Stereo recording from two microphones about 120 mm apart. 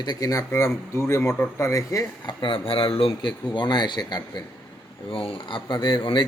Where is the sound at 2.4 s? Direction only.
45° left (ahead or behind).